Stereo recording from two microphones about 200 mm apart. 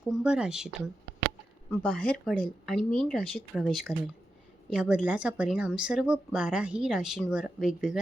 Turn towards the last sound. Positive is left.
turn(degrees=-5)  # may be behind; listen again after turning